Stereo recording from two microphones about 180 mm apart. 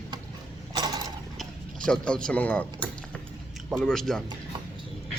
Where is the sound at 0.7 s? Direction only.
20° right (ahead or behind).